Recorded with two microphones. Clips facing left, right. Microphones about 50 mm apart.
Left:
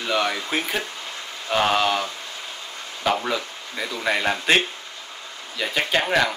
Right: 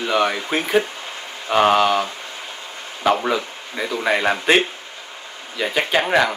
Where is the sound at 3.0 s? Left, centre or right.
Centre.